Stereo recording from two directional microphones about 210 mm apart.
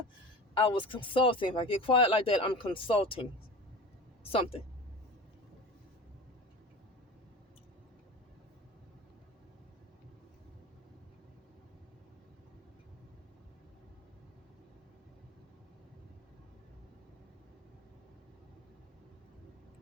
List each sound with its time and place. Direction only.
0.5 s speech: 25° left (ahead or behind)
4.3 s speech: 25° left (ahead or behind)